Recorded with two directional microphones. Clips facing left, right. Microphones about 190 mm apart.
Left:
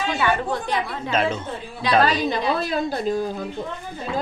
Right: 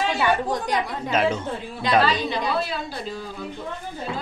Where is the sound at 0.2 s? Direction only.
15° right (ahead or behind).